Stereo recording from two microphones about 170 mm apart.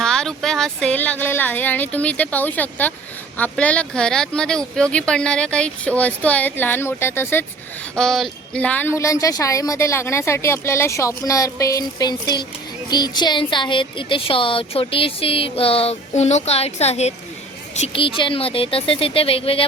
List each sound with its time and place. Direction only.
0.0 s a woman's voice: 5° left (ahead or behind)
7.9 s a woman's voice: 5° left (ahead or behind); by 19.6 s 35° left (ahead or behind)